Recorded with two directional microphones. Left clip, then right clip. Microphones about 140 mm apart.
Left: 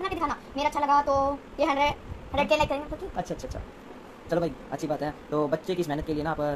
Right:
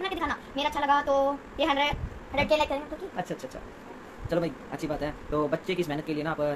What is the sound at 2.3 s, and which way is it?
Speech, 15° left (ahead or behind).